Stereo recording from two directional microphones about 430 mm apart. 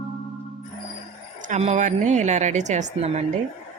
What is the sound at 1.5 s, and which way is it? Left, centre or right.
A woman's voice, centre.